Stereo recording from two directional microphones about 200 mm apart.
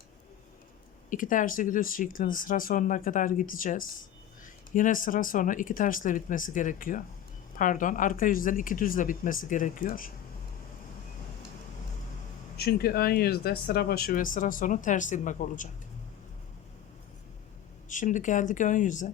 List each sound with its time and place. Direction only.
1.1 s speech: 40° left (ahead or behind)
12.5 s speech: 50° left (ahead or behind)
17.8 s speech: 40° left (ahead or behind)